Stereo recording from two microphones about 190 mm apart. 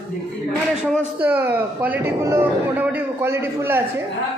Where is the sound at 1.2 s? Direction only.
10° right (ahead or behind).